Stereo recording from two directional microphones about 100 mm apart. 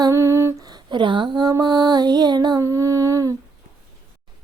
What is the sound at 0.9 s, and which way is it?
Speech, 55° right (ahead or behind).